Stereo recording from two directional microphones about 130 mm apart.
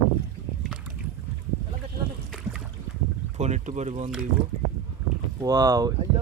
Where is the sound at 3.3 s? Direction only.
60° right (ahead or behind).